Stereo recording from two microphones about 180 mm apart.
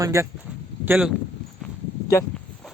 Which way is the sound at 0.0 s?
15° right (ahead or behind).